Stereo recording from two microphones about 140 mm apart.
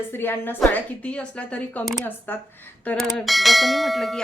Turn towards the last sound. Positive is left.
turn(degrees=0)  # may be behind; listen again after turning